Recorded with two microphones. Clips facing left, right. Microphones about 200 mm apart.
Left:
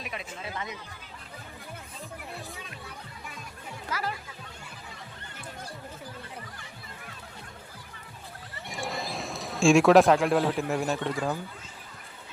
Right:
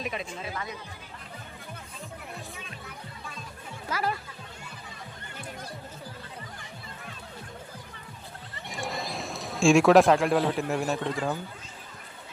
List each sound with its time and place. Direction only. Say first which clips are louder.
0.0 s speech: right 5 dB; 30° right (ahead or behind)
8.7 s speech: even; centre (ahead or behind)